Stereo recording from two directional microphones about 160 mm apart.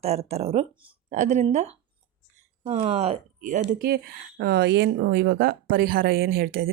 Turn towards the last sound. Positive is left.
turn(degrees=-70)  # may be behind; listen again after turning